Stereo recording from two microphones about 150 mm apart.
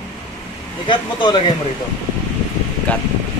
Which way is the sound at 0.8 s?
30° left (ahead or behind).